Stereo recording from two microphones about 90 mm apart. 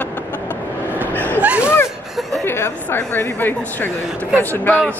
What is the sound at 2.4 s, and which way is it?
Speech, 25° left (ahead or behind).